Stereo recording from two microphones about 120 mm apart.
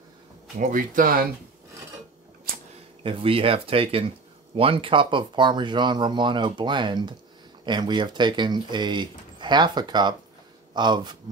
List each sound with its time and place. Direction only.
0.6 s speech: 90° right
3.0 s speech: 50° right (ahead or behind)